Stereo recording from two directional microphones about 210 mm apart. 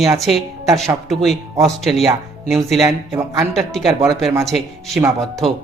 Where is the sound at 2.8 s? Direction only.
15° right (ahead or behind).